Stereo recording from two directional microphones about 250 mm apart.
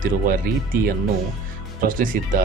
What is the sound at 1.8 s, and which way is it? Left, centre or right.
Speech, right.